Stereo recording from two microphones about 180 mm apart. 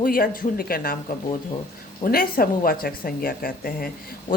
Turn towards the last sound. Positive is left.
turn(degrees=55)  # may be behind; listen again after turning